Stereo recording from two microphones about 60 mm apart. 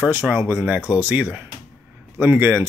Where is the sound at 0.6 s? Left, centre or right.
Right.